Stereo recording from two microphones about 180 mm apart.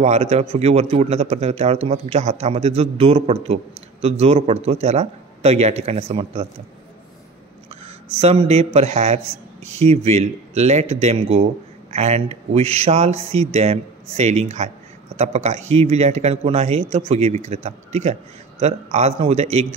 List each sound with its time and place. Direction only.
0.0 s a man's voice: 35° right (ahead or behind)
7.8 s a man's voice: 35° right (ahead or behind)